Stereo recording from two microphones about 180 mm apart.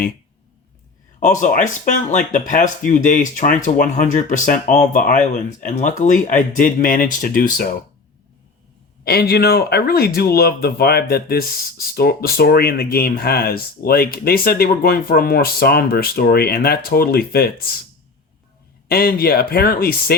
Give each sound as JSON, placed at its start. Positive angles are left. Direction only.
{"t": 1.2, "sound": "speech", "side_deg": 45}
{"t": 9.0, "sound": "speech", "side_deg": 60}
{"t": 18.9, "sound": "speech", "side_deg": 60}